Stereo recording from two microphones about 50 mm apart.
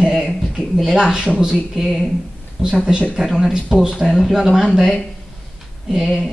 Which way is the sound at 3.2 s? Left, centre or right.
Centre.